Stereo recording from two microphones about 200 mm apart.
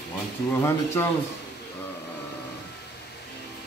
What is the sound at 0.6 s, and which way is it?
Speech, 15° left (ahead or behind).